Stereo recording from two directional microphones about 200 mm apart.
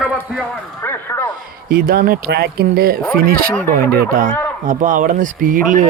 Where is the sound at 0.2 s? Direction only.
10° left (ahead or behind).